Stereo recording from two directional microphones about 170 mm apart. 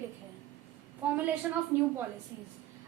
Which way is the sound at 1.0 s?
10° right (ahead or behind).